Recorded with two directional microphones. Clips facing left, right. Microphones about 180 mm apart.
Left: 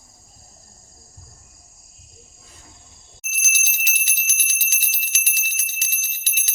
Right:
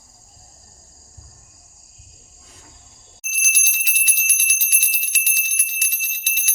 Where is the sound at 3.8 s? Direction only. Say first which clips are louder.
Even; 25° left (ahead or behind).